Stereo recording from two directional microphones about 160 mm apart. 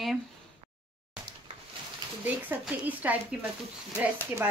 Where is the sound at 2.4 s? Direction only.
10° right (ahead or behind).